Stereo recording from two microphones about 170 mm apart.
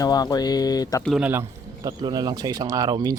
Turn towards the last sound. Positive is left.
turn(degrees=-20)  # may be behind; listen again after turning